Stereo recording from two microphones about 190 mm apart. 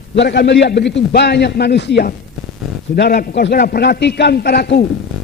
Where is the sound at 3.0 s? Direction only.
55° left (ahead or behind).